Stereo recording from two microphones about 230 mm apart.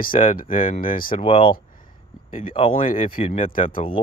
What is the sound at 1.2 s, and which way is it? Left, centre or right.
Speech, left.